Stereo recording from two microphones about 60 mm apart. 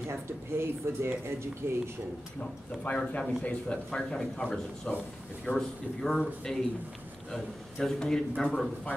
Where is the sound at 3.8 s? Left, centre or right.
Centre.